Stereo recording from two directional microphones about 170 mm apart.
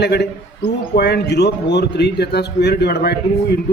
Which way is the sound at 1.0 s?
75° left (ahead or behind).